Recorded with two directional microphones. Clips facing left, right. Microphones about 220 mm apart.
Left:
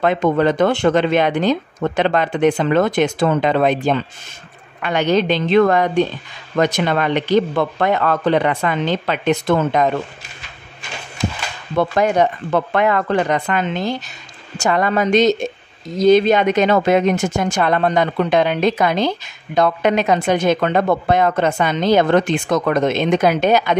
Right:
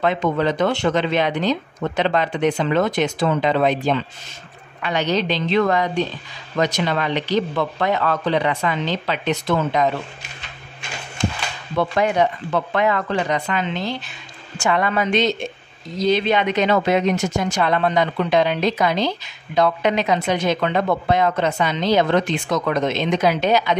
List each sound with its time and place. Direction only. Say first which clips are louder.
0.0 s a woman's voice: left 4 dB; 50° left (ahead or behind)
11.7 s a woman's voice: left 3 dB; 45° left (ahead or behind)